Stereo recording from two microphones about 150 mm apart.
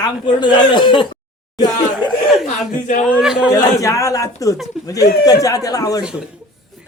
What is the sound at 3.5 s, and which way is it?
Speech, 20° left (ahead or behind).